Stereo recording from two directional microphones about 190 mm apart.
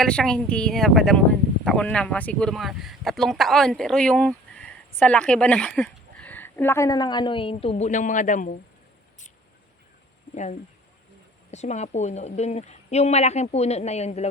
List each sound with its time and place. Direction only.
0.0 s speech: 5° left (ahead or behind); by 8.5 s 40° left (ahead or behind)
10.3 s a woman's voice: 40° left (ahead or behind)